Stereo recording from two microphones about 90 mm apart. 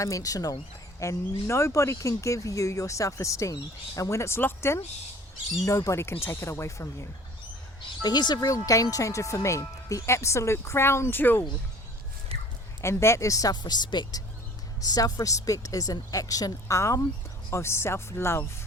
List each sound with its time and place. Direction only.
0.0 s speech: 40° left (ahead or behind)
7.8 s speech: 55° left (ahead or behind); by 11.4 s 25° left (ahead or behind)
12.3 s dog: 90° right
12.8 s speech: 30° left (ahead or behind)
13.5 s speech: 50° left (ahead or behind)
14.8 s speech: 40° left (ahead or behind)